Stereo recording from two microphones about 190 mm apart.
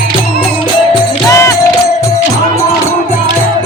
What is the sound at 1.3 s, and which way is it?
Music, 15° left (ahead or behind).